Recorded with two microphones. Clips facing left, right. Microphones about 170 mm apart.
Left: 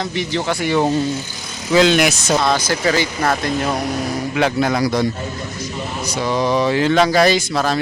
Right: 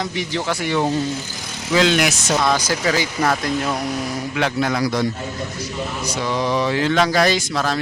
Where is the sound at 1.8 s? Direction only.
15° left (ahead or behind).